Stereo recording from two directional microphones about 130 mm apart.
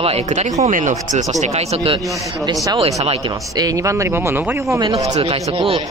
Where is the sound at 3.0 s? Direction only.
50° right (ahead or behind).